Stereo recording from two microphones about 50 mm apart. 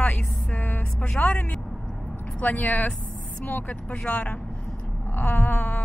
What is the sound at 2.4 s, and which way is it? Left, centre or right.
Speech, left.